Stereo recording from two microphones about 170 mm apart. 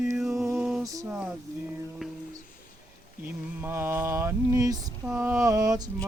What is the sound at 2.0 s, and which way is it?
Music, 5° right (ahead or behind).